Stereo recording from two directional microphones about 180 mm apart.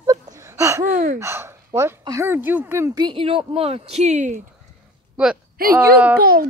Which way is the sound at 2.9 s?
25° right (ahead or behind).